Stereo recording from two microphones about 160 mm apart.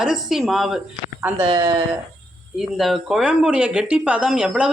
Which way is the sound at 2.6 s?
Centre (ahead or behind).